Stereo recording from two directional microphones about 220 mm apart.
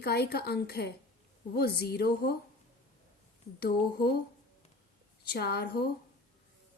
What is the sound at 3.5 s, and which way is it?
Speech, 45° left (ahead or behind).